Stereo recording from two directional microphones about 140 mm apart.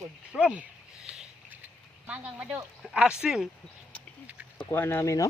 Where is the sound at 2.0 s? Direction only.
10° right (ahead or behind).